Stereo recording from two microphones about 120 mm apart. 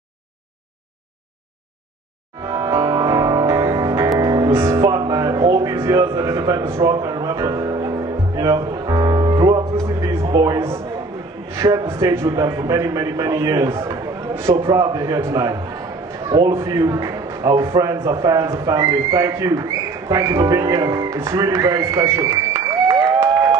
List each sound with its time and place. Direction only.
2.4 s music: 25° right (ahead or behind)
9.8 s a sound: 25° right (ahead or behind)
10.3 s a man's voice: 30° right (ahead or behind)